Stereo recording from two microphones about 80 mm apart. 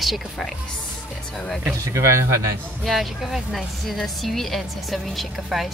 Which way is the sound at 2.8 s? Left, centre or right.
Centre.